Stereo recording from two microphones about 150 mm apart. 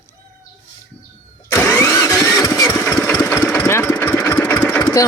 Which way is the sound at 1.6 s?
15° left (ahead or behind).